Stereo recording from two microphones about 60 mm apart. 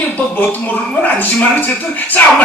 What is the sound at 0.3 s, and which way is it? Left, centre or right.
Speech, left.